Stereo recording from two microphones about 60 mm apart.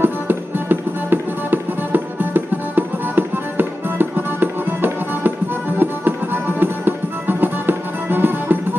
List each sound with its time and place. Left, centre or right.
0.0 s music: right